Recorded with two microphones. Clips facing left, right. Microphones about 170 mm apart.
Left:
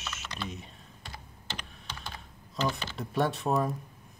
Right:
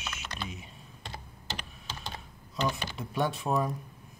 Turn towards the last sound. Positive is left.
turn(degrees=0)  # may be behind; listen again after turning